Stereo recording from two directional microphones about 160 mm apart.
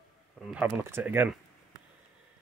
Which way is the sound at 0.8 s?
15° right (ahead or behind).